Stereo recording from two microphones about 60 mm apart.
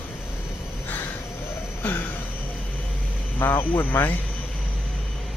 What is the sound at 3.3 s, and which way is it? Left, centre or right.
Speech, left.